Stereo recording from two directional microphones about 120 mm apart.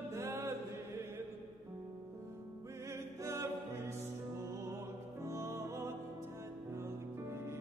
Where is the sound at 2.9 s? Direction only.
25° right (ahead or behind).